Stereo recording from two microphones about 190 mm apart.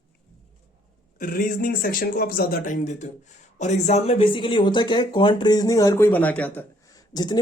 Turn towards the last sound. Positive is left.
turn(degrees=20)  # may be behind; listen again after turning